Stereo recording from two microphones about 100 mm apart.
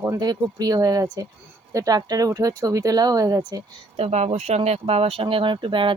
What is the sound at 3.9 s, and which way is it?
Speech, 90° right.